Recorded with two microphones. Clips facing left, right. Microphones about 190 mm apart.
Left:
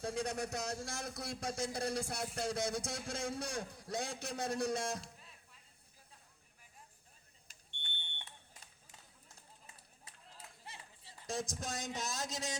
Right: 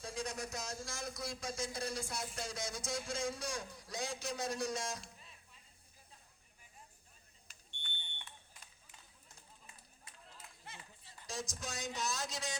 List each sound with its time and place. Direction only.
0.0 s speech: 60° left (ahead or behind)
7.8 s smoke detector: 30° left (ahead or behind)
10.0 s a sound: 35° left (ahead or behind)
11.3 s speech: 55° left (ahead or behind)